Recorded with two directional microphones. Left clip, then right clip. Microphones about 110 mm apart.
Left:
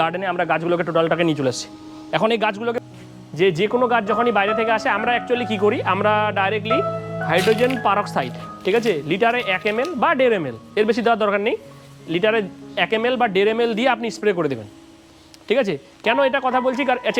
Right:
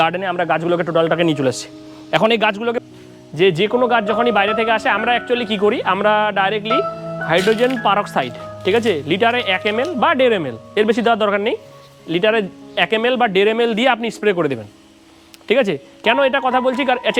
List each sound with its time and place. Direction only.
0.0 s speech: 45° right (ahead or behind)